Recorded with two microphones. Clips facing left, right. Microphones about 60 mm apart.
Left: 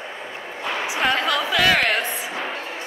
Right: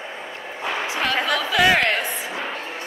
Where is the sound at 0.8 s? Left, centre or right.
Centre.